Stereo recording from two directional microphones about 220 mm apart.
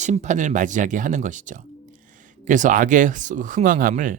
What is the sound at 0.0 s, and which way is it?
Speech, 30° right (ahead or behind).